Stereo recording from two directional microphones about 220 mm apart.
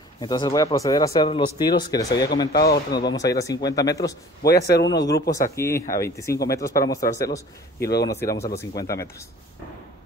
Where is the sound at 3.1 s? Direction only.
15° left (ahead or behind).